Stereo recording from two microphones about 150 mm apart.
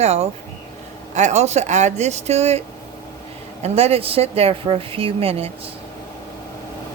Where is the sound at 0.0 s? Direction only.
45° right (ahead or behind).